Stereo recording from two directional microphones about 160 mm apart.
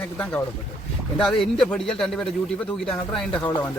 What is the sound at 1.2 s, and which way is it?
A man's voice, centre (ahead or behind).